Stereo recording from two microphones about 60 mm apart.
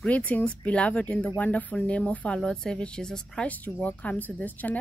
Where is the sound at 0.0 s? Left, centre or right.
Left.